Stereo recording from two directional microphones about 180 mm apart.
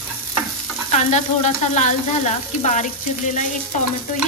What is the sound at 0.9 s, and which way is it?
Frying, 40° left (ahead or behind).